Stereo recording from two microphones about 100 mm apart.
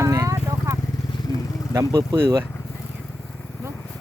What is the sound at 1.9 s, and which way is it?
Speech, 30° right (ahead or behind).